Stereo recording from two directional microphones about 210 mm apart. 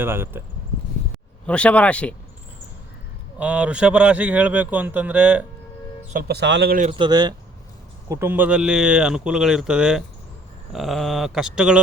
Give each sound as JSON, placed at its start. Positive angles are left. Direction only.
{"t": 0.0, "sound": "speech", "side_deg": -10}
{"t": 1.5, "sound": "speech", "side_deg": 5}
{"t": 3.3, "sound": "speech", "side_deg": -5}
{"t": 6.1, "sound": "a man's voice", "side_deg": -50}
{"t": 6.9, "sound": "speech", "side_deg": -20}